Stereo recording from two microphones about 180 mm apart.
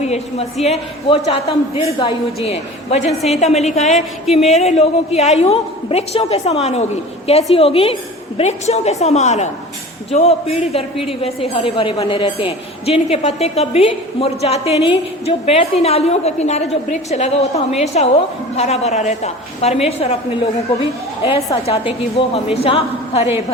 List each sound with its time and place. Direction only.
0.0 s a woman's voice: 35° left (ahead or behind)
21.2 s a woman's voice: 35° left (ahead or behind)